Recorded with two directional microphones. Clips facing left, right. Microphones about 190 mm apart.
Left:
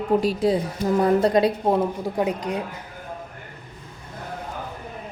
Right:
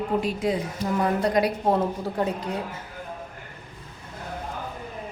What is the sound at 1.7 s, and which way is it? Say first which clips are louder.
Speech: left 2 dB; 15° left (ahead or behind).